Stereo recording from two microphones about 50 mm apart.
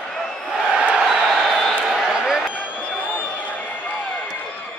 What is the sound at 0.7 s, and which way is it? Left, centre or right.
Crowd, centre.